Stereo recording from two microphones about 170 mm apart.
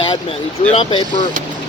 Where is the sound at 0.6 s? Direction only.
35° left (ahead or behind).